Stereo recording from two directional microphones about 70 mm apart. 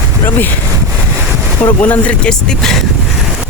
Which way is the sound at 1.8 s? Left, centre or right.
Left.